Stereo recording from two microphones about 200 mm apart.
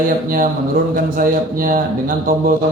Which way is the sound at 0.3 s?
45° right (ahead or behind).